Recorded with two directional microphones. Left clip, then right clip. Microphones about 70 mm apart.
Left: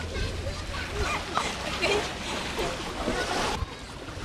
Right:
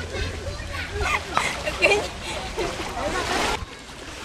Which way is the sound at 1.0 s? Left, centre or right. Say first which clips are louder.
Right 6 dB; right.